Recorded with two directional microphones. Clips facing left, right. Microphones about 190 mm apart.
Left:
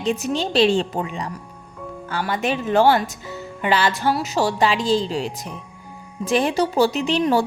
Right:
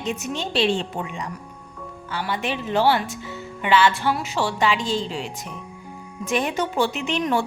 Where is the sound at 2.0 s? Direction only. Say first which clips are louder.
Left 4 dB; 45° left (ahead or behind).